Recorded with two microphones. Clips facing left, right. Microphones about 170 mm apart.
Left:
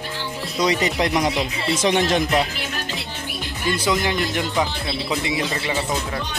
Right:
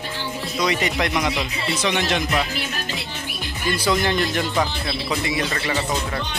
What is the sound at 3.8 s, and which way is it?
Speech, 15° left (ahead or behind).